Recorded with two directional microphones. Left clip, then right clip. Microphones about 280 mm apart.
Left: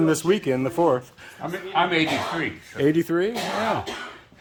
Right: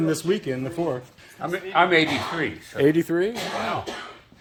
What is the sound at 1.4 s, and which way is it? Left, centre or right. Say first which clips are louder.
Speech: right 2 dB; centre.